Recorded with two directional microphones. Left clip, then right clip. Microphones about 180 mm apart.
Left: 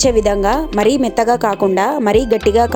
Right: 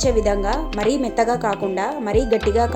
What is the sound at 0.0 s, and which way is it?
A woman's voice, 50° left (ahead or behind).